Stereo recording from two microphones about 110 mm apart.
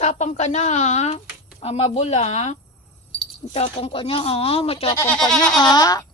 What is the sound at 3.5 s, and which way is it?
Speech, 60° left (ahead or behind).